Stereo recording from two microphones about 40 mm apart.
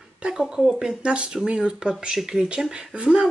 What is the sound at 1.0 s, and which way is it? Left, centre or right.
Speech, right.